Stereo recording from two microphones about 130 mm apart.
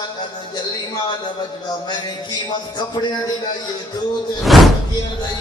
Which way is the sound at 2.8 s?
35° left (ahead or behind).